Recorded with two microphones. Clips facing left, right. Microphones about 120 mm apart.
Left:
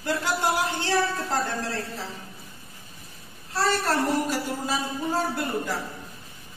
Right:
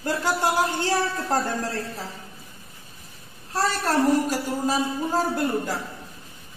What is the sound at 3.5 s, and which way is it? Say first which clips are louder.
Speech: right 1 dB; 40° right (ahead or behind).